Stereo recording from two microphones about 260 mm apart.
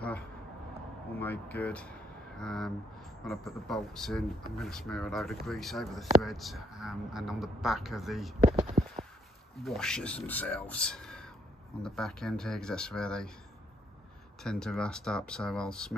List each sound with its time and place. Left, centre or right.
1.2 s speech: centre
8.8 s clip-clop: right
9.6 s speech: centre
14.4 s speech: centre